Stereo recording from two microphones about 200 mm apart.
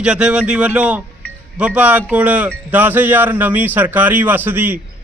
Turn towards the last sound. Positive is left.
turn(degrees=-10)  # may be behind; listen again after turning